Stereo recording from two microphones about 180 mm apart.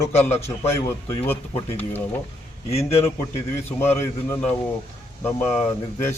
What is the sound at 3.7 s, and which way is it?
Speech, 15° left (ahead or behind).